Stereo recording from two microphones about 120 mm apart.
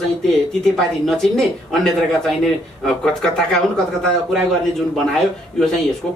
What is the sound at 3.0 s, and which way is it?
Speech, 5° left (ahead or behind).